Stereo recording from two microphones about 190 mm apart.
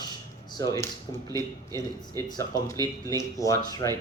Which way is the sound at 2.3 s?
20° left (ahead or behind).